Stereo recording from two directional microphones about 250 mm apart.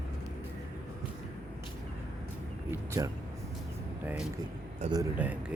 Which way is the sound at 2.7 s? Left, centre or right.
Centre.